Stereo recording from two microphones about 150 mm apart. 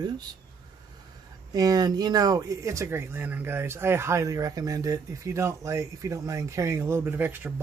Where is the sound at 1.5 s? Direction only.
25° right (ahead or behind).